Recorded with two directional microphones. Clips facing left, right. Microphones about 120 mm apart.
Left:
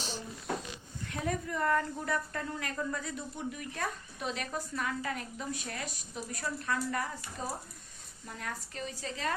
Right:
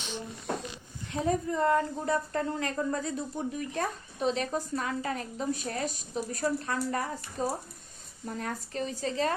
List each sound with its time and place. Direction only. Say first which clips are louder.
1.0 s a woman's voice: right 6 dB; 25° right (ahead or behind)